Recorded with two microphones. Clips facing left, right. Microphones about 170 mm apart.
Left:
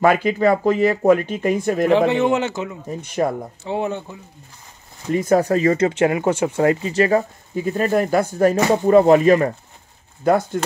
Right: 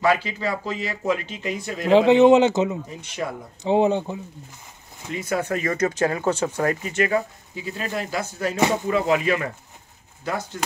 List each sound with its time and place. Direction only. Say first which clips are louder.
0.0 s speech: left 6 dB; 50° left (ahead or behind)
1.9 s speech: right 5 dB; 20° right (ahead or behind)
2.9 s speech: left 8 dB; 50° left (ahead or behind)
3.6 s speech: right 6 dB; 20° right (ahead or behind)
5.1 s speech: left 9 dB; 45° left (ahead or behind)